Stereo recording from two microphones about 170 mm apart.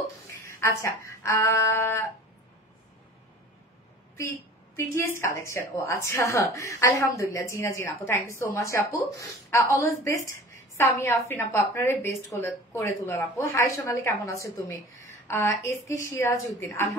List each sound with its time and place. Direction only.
0.0 s speech: 15° left (ahead or behind)
4.7 s a woman's voice: 15° left (ahead or behind)